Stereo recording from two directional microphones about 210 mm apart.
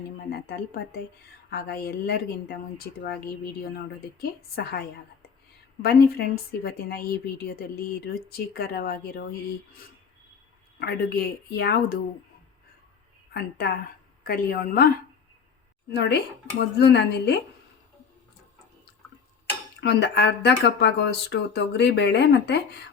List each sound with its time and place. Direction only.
0.3 s a woman's voice: 50° left (ahead or behind)
4.2 s a woman's voice: 50° left (ahead or behind)
10.8 s a woman's voice: 50° left (ahead or behind)
13.3 s a woman's voice: 50° left (ahead or behind)
15.9 s a woman's voice: 50° left (ahead or behind)
19.8 s a woman's voice: 50° left (ahead or behind)